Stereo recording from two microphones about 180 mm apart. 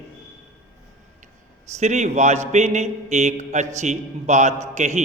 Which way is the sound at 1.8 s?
40° right (ahead or behind).